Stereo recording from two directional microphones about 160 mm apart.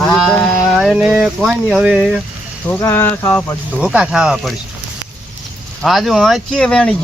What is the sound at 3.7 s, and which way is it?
Speech, 5° right (ahead or behind).